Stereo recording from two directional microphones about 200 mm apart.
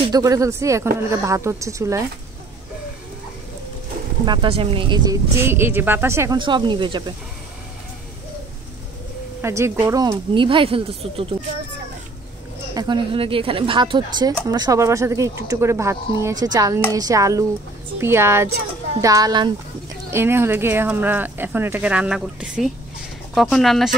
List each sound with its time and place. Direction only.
0.0 s speech: 20° right (ahead or behind)
4.3 s speech: 25° right (ahead or behind)
9.4 s speech: 15° right (ahead or behind)
12.7 s speech: 25° right (ahead or behind); by 23.9 s centre (ahead or behind)